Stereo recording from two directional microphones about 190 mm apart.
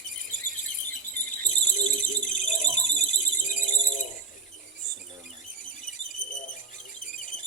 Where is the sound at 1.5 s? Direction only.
40° left (ahead or behind).